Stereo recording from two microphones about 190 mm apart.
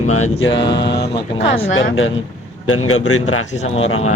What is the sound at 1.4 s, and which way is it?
Speech, 30° left (ahead or behind).